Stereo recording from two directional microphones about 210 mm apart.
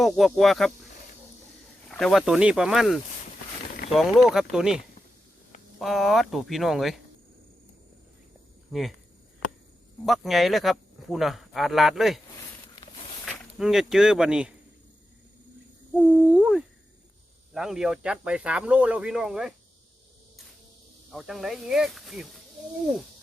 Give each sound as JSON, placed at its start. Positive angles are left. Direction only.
{"t": 0.0, "sound": "speech", "side_deg": 0}
{"t": 1.9, "sound": "speech", "side_deg": 0}
{"t": 5.8, "sound": "speech", "side_deg": 0}
{"t": 8.7, "sound": "speech", "side_deg": 0}
{"t": 10.1, "sound": "speech", "side_deg": 0}
{"t": 12.6, "sound": "a sound", "side_deg": 20}
{"t": 13.2, "sound": "speech", "side_deg": 0}
{"t": 16.0, "sound": "speech", "side_deg": -5}
{"t": 21.1, "sound": "speech", "side_deg": 0}